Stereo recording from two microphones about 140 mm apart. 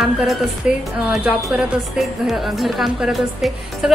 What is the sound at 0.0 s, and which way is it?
Speech, centre (ahead or behind).